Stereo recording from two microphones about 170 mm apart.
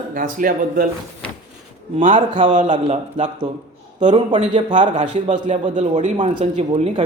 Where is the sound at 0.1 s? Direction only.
55° right (ahead or behind).